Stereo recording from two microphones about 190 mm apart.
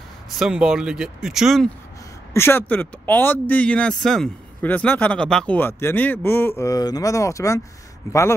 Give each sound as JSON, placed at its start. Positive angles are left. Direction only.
{"t": 0.4, "sound": "speech", "side_deg": -5}
{"t": 2.3, "sound": "speech", "side_deg": 10}